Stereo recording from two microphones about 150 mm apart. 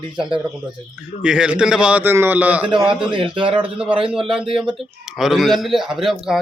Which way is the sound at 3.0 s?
35° right (ahead or behind).